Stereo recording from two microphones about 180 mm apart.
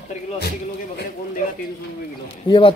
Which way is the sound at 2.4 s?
30° left (ahead or behind).